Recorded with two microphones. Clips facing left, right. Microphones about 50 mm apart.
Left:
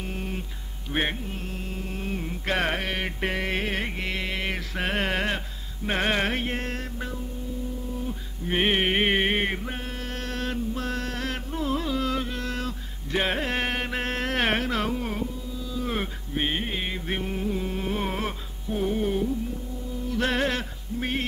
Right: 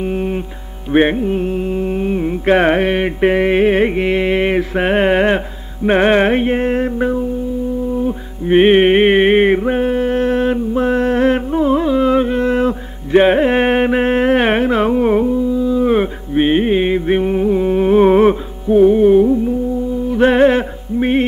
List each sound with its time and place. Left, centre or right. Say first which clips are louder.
0.0 s mantra: right 15 dB; right
0.9 s music: right 16 dB; right
8.5 s a sound: right 14 dB; right
18.8 s music: right 17 dB; right